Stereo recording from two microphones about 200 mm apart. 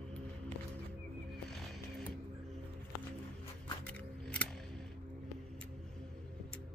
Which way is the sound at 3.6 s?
5° left (ahead or behind).